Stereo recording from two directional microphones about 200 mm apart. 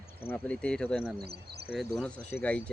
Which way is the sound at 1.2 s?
55° right (ahead or behind).